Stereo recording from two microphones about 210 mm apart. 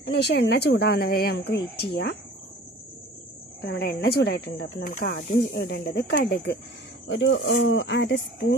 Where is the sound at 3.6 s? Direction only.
50° left (ahead or behind).